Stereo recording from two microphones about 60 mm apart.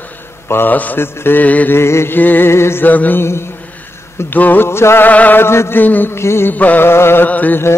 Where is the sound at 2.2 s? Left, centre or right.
Left.